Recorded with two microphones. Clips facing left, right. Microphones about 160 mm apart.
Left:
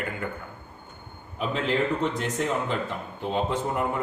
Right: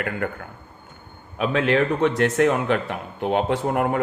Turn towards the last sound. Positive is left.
turn(degrees=-65)  # may be behind; listen again after turning